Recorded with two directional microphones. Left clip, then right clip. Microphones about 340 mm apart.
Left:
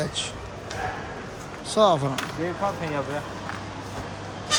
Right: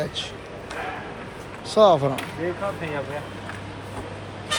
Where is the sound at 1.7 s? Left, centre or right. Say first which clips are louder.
Right 4 dB; centre.